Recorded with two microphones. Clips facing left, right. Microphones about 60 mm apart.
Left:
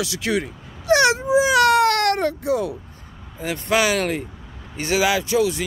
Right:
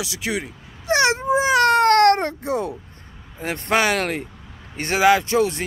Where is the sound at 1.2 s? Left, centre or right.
Right.